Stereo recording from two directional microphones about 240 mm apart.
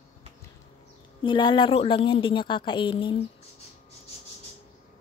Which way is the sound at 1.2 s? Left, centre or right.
Centre.